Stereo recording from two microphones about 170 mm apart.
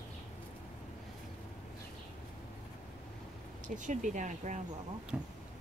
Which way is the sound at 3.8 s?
50° right (ahead or behind).